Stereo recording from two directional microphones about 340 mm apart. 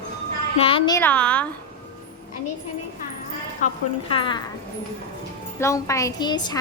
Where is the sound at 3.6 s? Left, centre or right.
Centre.